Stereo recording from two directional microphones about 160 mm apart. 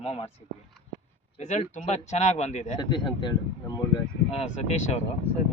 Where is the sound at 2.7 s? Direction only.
30° left (ahead or behind).